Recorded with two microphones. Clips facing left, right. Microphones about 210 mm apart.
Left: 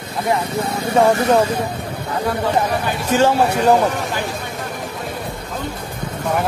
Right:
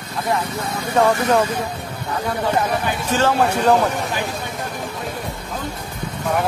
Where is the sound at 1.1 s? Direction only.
35° left (ahead or behind).